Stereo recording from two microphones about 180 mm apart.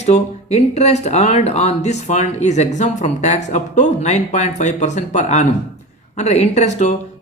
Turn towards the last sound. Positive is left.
turn(degrees=40)  # may be behind; listen again after turning